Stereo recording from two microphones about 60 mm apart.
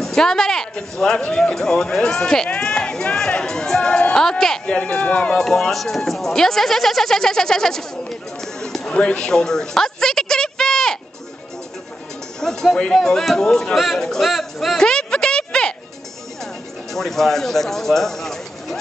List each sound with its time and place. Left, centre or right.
0.0 s a sound: centre
0.9 s speech: centre
4.6 s speech: centre
5.4 s a woman's voice: centre
12.4 s speech: centre
14.9 s a sound: centre
16.9 s speech: centre